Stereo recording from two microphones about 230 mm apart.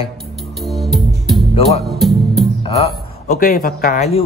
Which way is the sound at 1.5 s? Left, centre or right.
Left.